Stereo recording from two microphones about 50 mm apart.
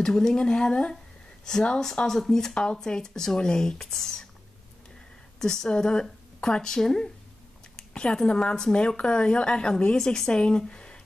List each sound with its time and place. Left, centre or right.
0.0 s speech: centre
5.4 s speech: centre
7.9 s a sound: centre
8.3 s speech: centre